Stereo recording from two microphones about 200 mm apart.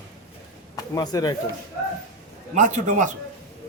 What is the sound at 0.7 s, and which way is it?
Speech, 20° left (ahead or behind).